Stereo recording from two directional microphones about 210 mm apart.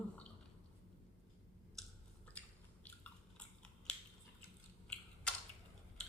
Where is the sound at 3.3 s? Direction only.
5° left (ahead or behind).